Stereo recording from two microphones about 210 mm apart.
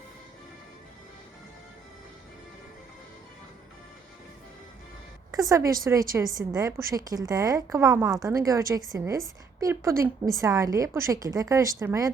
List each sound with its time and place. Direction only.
5.3 s a woman's voice: 15° right (ahead or behind)